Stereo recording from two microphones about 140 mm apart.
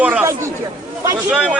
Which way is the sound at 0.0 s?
10° right (ahead or behind).